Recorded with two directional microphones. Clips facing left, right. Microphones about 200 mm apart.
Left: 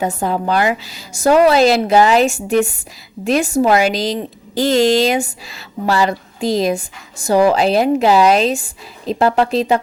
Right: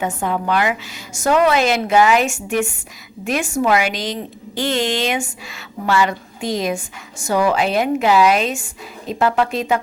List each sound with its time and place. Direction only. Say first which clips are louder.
0.0 s a woman's voice: left 3 dB; 35° left (ahead or behind)